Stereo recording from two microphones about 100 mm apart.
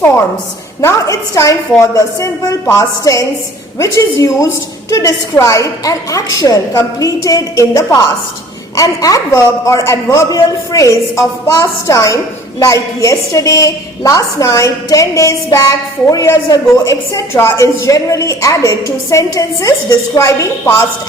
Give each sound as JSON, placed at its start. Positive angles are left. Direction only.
{"t": 0.8, "sound": "a man's voice", "side_deg": 30}